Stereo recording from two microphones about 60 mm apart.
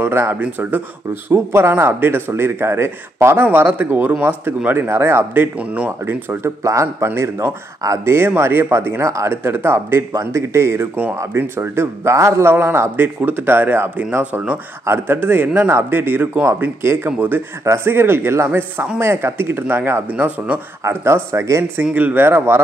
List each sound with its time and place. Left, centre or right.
0.0 s speech: right
1.3 s speech: right
4.7 s speech: right
6.6 s a man's voice: right
7.2 s speech: right
9.0 s speech: right
20.9 s speech: right
21.9 s speech: right